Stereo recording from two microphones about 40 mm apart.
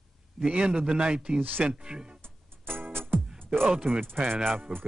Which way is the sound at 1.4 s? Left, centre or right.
Right.